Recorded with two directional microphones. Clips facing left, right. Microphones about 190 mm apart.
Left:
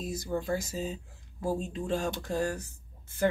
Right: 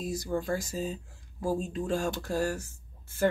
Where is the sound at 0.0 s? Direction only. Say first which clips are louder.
Right 1 dB; 20° left (ahead or behind).